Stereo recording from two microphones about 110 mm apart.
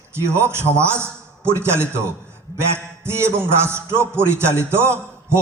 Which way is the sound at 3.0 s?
25° right (ahead or behind).